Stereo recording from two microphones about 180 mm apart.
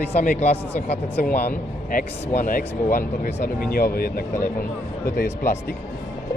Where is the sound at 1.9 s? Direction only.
45° left (ahead or behind).